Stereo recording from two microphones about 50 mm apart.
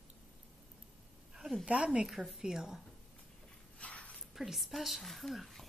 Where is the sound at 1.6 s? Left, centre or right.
Right.